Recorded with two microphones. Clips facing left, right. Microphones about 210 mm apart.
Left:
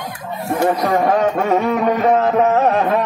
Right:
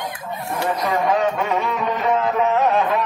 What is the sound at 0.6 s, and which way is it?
Speech, 45° left (ahead or behind).